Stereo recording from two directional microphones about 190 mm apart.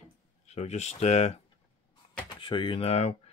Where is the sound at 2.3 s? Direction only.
25° left (ahead or behind).